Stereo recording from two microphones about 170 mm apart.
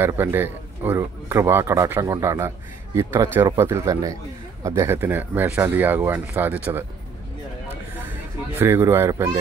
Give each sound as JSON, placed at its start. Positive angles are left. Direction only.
{"t": 0.0, "sound": "speech", "side_deg": -15}
{"t": 8.5, "sound": "speech", "side_deg": -15}